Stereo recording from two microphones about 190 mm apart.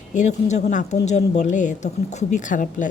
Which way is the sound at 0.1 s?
40° left (ahead or behind).